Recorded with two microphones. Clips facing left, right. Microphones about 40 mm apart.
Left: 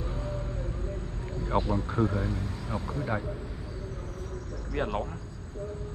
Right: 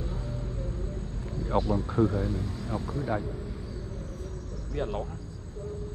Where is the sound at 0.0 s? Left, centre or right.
Left.